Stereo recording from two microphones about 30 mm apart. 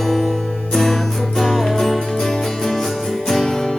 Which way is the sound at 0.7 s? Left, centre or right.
Centre.